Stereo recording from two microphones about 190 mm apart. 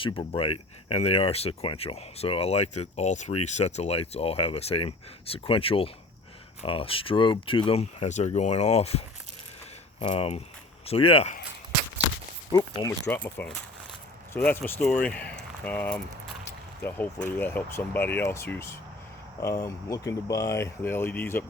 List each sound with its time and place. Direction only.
0.2 s speech: 30° left (ahead or behind)
12.5 s speech: 20° left (ahead or behind)
13.1 s speech: 10° left (ahead or behind)